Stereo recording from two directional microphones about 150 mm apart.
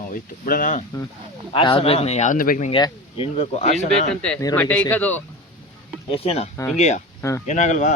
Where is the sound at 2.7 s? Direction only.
35° left (ahead or behind).